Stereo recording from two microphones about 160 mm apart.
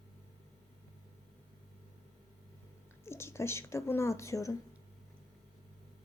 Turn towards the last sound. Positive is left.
turn(degrees=20)  # may be behind; listen again after turning